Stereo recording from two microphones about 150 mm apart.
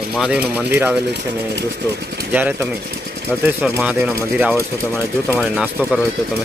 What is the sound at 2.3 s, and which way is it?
Speech, 10° right (ahead or behind).